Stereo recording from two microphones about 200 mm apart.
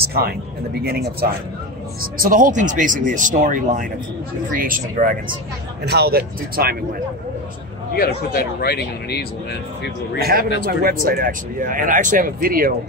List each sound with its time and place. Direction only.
0.0 s speech: 50° right (ahead or behind)
5.9 s speech: 55° right (ahead or behind)
8.5 s speech: 55° left (ahead or behind)
10.1 s speech: 50° right (ahead or behind)